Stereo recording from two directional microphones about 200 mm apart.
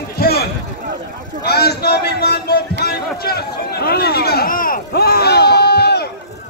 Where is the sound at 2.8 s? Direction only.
50° left (ahead or behind).